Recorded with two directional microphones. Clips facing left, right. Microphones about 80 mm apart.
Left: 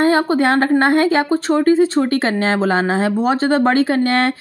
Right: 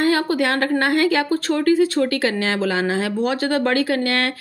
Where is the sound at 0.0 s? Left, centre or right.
Left.